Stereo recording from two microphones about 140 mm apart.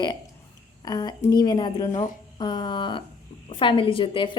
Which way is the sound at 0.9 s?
30° left (ahead or behind).